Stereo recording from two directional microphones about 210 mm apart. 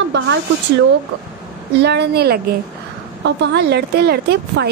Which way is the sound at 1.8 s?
50° right (ahead or behind).